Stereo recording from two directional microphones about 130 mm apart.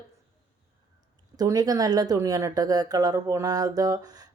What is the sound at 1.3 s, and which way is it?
A woman's voice, 30° right (ahead or behind).